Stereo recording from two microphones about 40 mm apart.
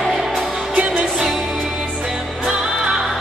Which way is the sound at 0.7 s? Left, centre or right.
Right.